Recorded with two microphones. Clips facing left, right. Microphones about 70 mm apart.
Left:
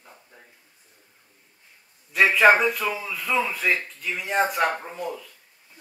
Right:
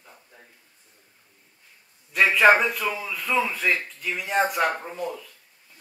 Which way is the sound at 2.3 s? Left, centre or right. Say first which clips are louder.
Even; centre.